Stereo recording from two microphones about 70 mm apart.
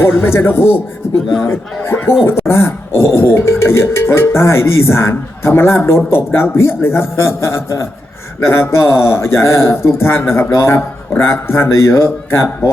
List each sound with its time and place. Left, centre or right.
0.0 s speech: left